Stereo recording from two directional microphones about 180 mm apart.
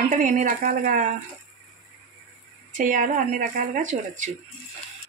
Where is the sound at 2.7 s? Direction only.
45° right (ahead or behind).